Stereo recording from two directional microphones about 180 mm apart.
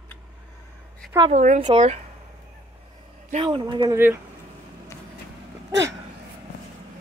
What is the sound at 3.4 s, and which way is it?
Speech, 25° right (ahead or behind).